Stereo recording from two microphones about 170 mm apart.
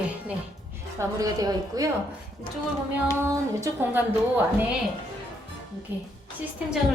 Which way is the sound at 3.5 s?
15° right (ahead or behind).